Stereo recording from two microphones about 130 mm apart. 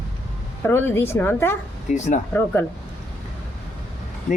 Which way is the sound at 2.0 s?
65° left (ahead or behind).